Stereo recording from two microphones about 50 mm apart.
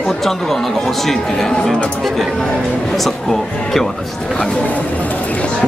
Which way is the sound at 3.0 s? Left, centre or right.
Centre.